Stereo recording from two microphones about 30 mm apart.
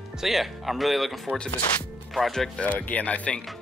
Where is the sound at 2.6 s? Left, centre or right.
Left.